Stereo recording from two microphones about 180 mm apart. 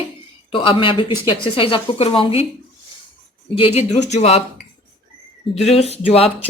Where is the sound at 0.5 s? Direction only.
30° left (ahead or behind).